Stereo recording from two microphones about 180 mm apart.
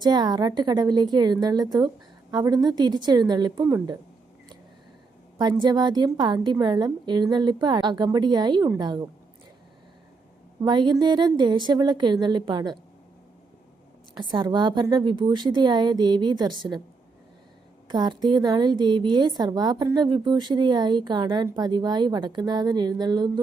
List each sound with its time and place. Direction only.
0.0 s a woman's voice: 20° right (ahead or behind)
5.4 s a woman's voice: 25° right (ahead or behind)
10.6 s a woman's voice: 25° right (ahead or behind)
14.2 s a woman's voice: 25° right (ahead or behind)
17.8 s a woman's voice: 25° right (ahead or behind)
21.4 s speech: 15° right (ahead or behind)
21.7 s a woman's voice: 25° right (ahead or behind)